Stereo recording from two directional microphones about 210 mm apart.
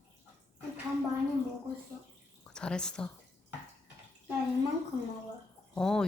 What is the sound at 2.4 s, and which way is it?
Speech, 5° left (ahead or behind).